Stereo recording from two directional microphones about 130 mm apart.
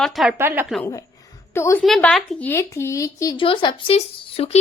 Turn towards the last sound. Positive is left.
turn(degrees=50)  # may be behind; listen again after turning